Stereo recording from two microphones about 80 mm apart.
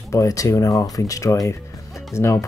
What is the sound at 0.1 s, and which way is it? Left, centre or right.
Speech, left.